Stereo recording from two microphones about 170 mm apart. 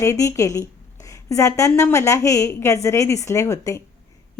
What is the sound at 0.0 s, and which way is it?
A woman's voice, 15° left (ahead or behind).